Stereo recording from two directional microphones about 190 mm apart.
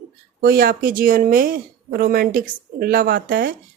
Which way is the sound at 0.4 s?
50° right (ahead or behind).